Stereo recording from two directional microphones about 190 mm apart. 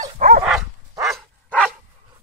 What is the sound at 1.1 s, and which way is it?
Dog, 5° left (ahead or behind).